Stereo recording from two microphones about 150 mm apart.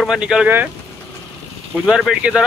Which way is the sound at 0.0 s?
5° right (ahead or behind).